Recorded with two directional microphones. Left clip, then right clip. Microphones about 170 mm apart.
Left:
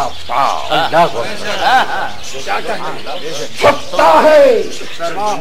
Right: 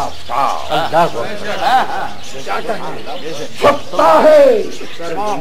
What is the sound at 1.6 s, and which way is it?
Speech, 25° left (ahead or behind).